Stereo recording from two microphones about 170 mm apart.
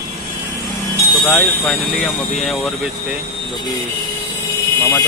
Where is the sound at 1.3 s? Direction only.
Centre (ahead or behind).